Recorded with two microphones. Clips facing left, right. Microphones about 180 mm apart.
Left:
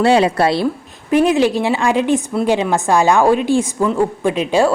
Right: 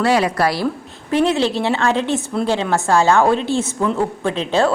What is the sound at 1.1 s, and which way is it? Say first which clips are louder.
A woman's voice: left 3 dB; 15° left (ahead or behind).